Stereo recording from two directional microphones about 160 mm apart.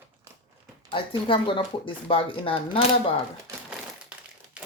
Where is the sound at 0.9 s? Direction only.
30° left (ahead or behind).